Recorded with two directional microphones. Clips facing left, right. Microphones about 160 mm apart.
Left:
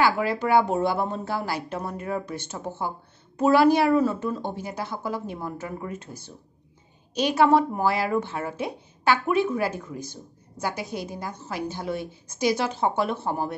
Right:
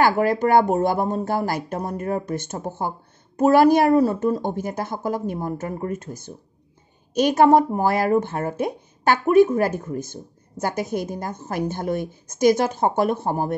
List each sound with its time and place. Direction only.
0.0 s a woman's voice: 45° right (ahead or behind)